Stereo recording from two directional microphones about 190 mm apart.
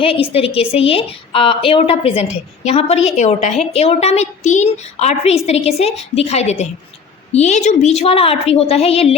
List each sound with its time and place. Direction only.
0.0 s a woman's voice: 30° left (ahead or behind)